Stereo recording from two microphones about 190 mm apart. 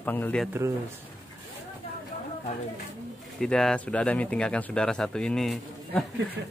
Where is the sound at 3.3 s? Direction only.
5° left (ahead or behind).